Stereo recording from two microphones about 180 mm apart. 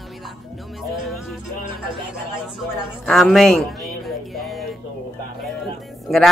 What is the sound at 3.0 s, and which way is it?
Speech, centre (ahead or behind).